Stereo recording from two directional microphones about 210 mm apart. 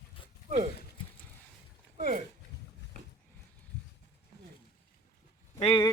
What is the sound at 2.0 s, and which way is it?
Speech, 40° right (ahead or behind).